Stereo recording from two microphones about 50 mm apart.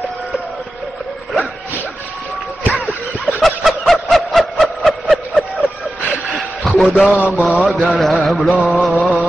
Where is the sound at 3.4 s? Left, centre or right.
Centre.